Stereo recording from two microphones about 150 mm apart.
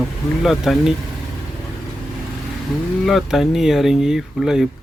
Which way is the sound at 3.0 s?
Centre (ahead or behind).